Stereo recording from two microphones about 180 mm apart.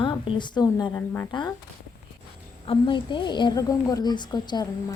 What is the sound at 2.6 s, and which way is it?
A woman's voice, 30° left (ahead or behind).